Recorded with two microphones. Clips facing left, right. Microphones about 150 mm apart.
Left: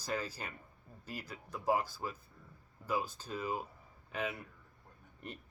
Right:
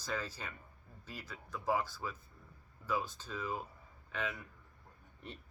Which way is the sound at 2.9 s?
10° left (ahead or behind).